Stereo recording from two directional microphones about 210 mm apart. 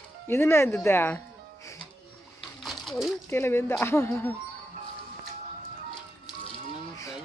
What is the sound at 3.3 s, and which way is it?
Speech, 10° left (ahead or behind).